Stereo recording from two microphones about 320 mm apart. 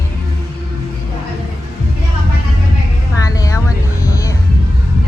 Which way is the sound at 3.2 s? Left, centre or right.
Centre.